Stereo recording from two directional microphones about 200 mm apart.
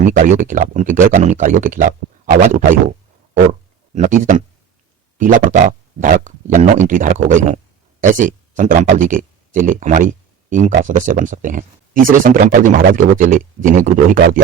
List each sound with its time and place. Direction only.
0.0 s speech: 40° right (ahead or behind)
3.9 s speech: 40° right (ahead or behind)